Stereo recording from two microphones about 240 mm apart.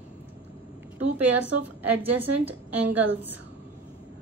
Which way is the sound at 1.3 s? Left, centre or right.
Right.